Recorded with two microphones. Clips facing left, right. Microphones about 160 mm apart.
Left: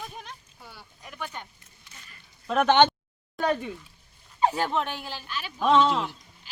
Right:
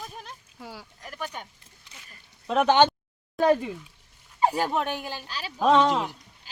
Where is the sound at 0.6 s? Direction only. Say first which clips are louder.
Right 7 dB; 90° right.